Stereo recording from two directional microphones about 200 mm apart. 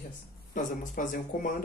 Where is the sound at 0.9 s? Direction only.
45° left (ahead or behind).